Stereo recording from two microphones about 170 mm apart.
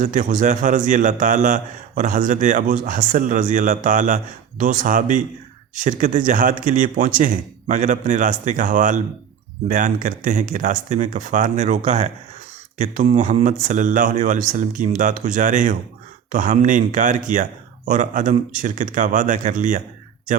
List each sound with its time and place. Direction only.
0.0 s a man's voice: 50° right (ahead or behind)